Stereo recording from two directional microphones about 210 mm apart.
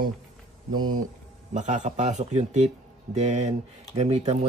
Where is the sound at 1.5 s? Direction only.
35° right (ahead or behind).